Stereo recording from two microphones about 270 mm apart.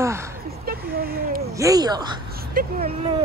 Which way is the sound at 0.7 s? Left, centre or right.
Right.